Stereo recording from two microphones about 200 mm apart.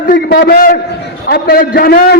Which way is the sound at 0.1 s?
50° left (ahead or behind).